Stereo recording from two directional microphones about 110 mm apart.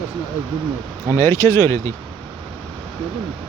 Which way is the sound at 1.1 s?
25° left (ahead or behind).